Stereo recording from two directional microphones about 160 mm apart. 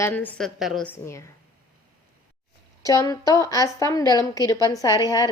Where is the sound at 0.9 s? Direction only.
15° left (ahead or behind).